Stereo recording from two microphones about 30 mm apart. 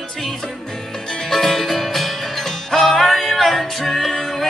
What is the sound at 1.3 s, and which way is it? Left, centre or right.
Music, centre.